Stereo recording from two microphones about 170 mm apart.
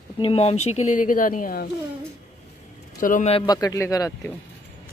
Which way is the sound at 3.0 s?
50° left (ahead or behind).